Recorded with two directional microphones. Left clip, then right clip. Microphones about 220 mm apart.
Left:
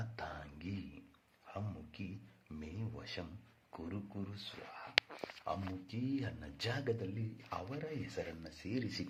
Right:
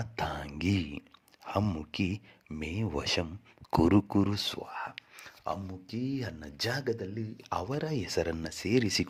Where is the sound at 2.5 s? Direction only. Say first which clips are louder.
Right 15 dB; 40° right (ahead or behind); by 4.4 s 55° right (ahead or behind).